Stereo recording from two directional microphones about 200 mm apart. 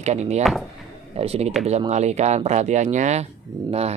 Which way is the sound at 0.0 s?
35° right (ahead or behind).